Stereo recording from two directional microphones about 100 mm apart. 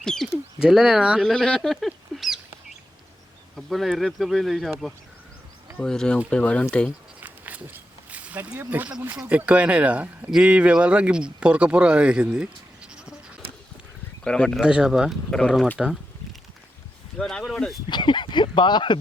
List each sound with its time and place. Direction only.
0.0 s speech: 5° left (ahead or behind)
0.6 s speech: 5° right (ahead or behind)
1.2 s speech: 5° left (ahead or behind)
3.5 s speech: centre (ahead or behind)
7.2 s a sound: 15° right (ahead or behind)
9.2 s speech: 15° right (ahead or behind)
14.3 s speech: 10° left (ahead or behind)
14.6 s speech: 5° right (ahead or behind)
17.2 s speech: 5° left (ahead or behind)
17.8 s speech: 50° left (ahead or behind)